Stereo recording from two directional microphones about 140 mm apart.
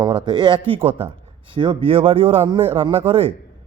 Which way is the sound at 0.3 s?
35° right (ahead or behind).